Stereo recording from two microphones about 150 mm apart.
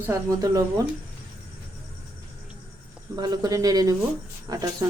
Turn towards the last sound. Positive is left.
turn(degrees=-25)  # may be behind; listen again after turning